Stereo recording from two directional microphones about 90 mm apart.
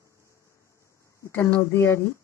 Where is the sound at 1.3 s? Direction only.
30° left (ahead or behind).